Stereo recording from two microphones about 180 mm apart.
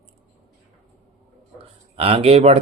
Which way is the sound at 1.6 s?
30° right (ahead or behind).